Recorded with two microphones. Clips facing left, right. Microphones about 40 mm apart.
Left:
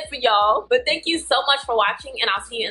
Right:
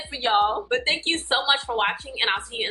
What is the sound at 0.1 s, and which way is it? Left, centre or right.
Speech, left.